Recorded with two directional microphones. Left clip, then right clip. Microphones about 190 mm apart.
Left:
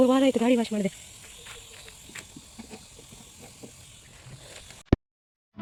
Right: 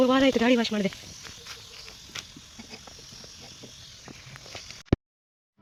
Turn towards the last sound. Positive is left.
turn(degrees=0)  # may be behind; listen again after turning